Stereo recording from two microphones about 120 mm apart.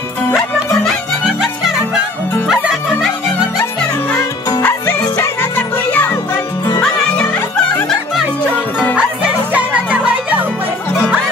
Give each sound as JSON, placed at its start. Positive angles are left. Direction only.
{"t": 0.8, "sound": "music", "side_deg": 0}
{"t": 4.2, "sound": "music", "side_deg": 20}
{"t": 9.5, "sound": "music", "side_deg": -10}